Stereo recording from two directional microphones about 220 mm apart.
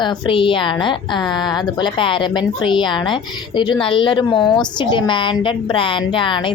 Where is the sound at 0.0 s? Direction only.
20° left (ahead or behind).